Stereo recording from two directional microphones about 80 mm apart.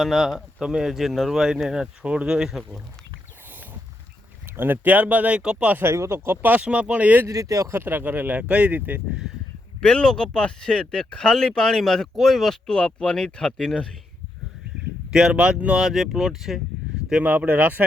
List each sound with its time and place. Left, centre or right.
0.0 s speech: centre
4.5 s speech: right
5.7 s speech: right
7.3 s speech: right
7.8 s speech: right
9.8 s speech: centre
15.1 s speech: centre
17.1 s speech: centre